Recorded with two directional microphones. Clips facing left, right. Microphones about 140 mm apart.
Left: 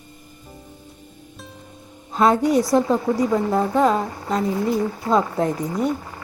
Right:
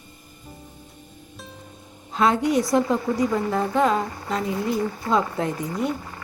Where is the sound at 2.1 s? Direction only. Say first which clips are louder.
Left 3 dB; 45° left (ahead or behind).